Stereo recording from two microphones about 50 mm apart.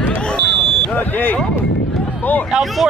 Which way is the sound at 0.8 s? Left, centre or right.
Left.